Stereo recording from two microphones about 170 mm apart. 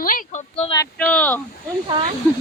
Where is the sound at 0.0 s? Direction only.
55° left (ahead or behind).